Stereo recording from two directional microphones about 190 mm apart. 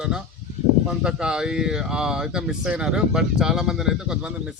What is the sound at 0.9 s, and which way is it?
Speech, 5° right (ahead or behind).